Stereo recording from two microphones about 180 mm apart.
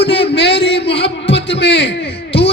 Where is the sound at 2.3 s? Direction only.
35° left (ahead or behind).